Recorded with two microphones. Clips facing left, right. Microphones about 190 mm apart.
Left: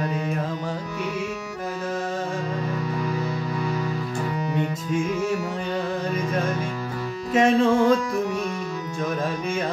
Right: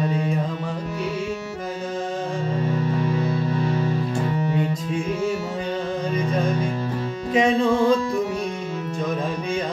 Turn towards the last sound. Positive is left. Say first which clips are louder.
# even
turn(degrees=5)  # may be behind; listen again after turning